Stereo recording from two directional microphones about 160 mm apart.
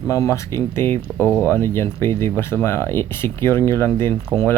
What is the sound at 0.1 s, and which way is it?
Speech, 20° left (ahead or behind).